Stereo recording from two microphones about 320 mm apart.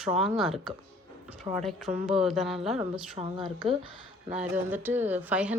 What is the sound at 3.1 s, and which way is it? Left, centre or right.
Speech, centre.